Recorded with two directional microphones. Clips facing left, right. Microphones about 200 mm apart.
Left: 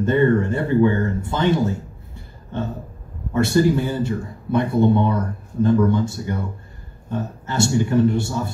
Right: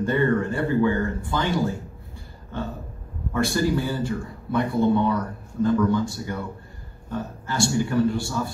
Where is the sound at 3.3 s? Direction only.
25° left (ahead or behind).